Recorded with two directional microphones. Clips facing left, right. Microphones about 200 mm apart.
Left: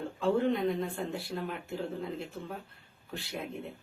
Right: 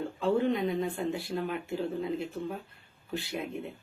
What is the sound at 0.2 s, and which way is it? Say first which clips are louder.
A woman's voice: even; centre (ahead or behind).